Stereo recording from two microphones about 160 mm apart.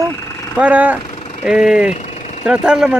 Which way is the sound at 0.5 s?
10° right (ahead or behind).